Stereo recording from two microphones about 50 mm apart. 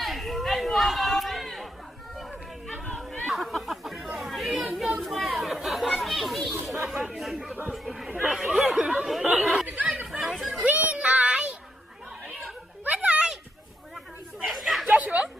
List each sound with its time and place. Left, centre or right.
0.0 s chatter: centre
9.0 s a sound: centre
9.4 s chatter: centre
9.6 s chatter: right
10.1 s chatter: centre
10.7 s child singing: right
12.3 s a sound: centre
12.8 s children playing: right
14.4 s chatter: centre
14.8 s a sound: right